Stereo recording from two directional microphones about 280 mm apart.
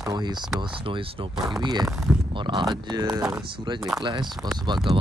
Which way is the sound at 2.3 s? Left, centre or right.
Centre.